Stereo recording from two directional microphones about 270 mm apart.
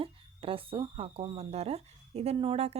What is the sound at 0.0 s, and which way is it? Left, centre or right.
Speech, centre.